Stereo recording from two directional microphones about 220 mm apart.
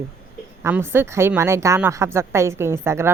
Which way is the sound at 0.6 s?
10° right (ahead or behind).